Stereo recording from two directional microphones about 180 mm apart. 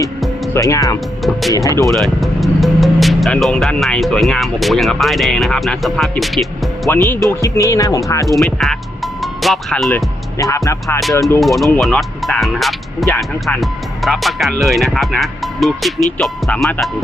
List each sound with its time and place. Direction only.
0.5 s speech: 15° left (ahead or behind)
1.2 s music: centre (ahead or behind)
1.5 s music: 20° left (ahead or behind)
1.8 s speech: centre (ahead or behind)
7.3 s speech: 15° left (ahead or behind)
8.3 s speech: centre (ahead or behind)
10.3 s music: 20° left (ahead or behind)
11.1 s speech: 20° left (ahead or behind)
11.3 s speech: centre (ahead or behind)